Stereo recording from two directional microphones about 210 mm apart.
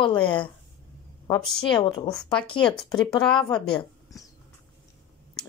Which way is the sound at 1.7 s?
20° left (ahead or behind).